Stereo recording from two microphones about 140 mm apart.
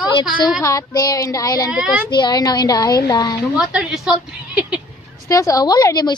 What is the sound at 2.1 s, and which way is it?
A woman's voice, 30° left (ahead or behind).